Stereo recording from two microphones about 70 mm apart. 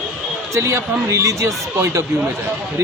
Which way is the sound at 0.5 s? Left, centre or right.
Right.